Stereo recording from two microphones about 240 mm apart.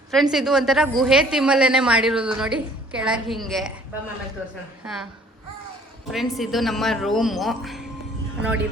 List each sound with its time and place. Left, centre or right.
0.1 s a woman's voice: centre
6.1 s a woman's voice: centre